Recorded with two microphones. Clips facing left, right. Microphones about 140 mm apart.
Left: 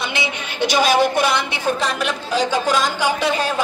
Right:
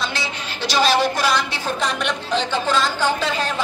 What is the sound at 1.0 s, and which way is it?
Speech, 55° left (ahead or behind).